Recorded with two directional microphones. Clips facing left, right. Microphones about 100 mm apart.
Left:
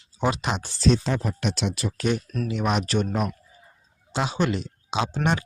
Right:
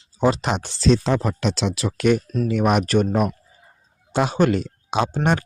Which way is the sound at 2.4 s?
50° right (ahead or behind).